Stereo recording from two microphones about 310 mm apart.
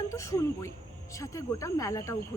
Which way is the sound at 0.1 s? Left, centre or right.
Centre.